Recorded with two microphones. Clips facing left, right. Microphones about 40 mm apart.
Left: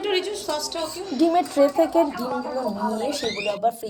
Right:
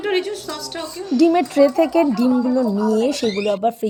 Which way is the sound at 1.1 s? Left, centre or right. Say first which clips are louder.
Right 5 dB; right.